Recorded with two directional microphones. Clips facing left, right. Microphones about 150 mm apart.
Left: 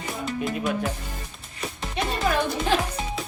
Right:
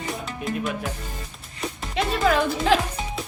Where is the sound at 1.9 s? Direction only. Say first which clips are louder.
Right 3 dB; 90° right.